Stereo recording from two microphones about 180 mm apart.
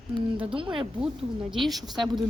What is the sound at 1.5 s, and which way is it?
Speech, centre (ahead or behind).